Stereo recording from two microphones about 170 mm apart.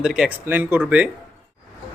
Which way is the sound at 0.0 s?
5° right (ahead or behind).